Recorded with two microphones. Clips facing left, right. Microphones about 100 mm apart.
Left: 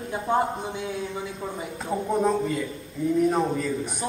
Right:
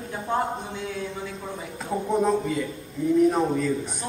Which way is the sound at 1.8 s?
Centre (ahead or behind).